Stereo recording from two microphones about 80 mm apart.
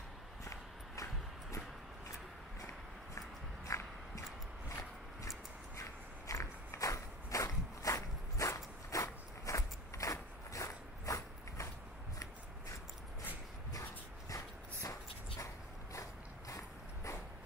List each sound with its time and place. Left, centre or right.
3.6 s biting: left
4.6 s a sound: left
14.3 s dog: left